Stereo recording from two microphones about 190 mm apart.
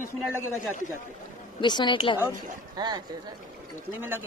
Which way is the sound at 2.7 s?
20° right (ahead or behind).